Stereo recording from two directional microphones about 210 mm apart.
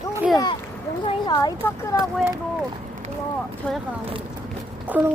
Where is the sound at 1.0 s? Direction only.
20° left (ahead or behind).